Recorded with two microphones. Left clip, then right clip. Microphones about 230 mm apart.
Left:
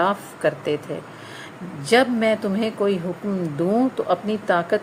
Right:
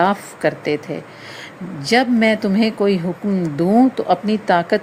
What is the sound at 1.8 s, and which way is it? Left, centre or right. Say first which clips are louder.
A woman's voice: right 2 dB; centre.